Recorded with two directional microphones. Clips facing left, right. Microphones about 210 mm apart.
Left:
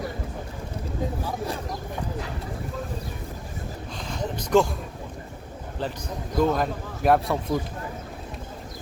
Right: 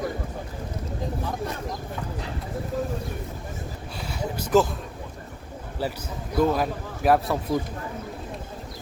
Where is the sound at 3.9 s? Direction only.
10° right (ahead or behind).